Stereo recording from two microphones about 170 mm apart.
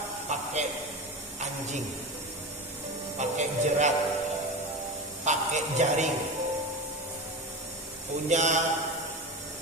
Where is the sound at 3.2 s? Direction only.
45° right (ahead or behind).